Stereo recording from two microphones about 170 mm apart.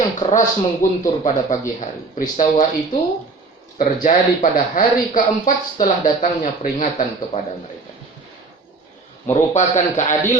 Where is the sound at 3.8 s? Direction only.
55° left (ahead or behind).